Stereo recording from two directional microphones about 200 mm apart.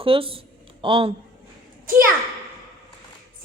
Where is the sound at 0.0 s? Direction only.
25° right (ahead or behind).